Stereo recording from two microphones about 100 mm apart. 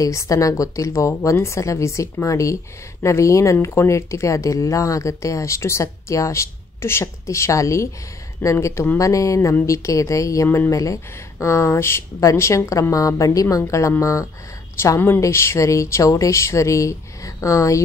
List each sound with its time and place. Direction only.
0.0 s a woman's voice: 30° left (ahead or behind)